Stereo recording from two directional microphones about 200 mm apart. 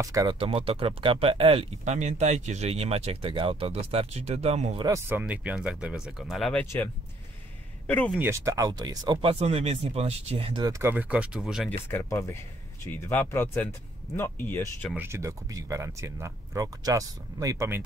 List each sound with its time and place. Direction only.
0.0 s speech: 15° right (ahead or behind); by 4.8 s 35° right (ahead or behind)
4.8 s speech: 10° right (ahead or behind)
6.6 s speech: 10° left (ahead or behind)
8.2 s speech: 15° right (ahead or behind)
11.9 s speech: 15° left (ahead or behind)
15.0 s speech: 15° right (ahead or behind)